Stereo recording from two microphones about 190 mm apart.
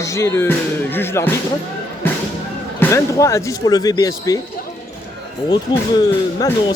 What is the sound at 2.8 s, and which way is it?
Speech, 15° left (ahead or behind).